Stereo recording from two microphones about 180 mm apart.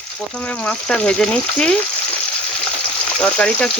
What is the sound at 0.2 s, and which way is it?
Speech, 5° left (ahead or behind).